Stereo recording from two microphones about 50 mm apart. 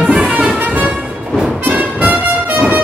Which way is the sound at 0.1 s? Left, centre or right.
Right.